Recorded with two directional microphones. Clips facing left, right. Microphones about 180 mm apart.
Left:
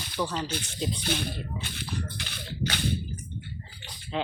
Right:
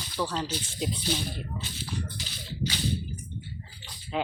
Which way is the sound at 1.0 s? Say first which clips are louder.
Left 1 dB; 60° left (ahead or behind).